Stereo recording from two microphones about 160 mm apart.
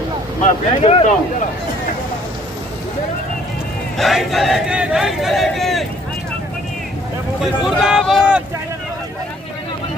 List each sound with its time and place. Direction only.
0.8 s speech: 40° left (ahead or behind)
3.9 s speech: centre (ahead or behind)
7.4 s speech: centre (ahead or behind)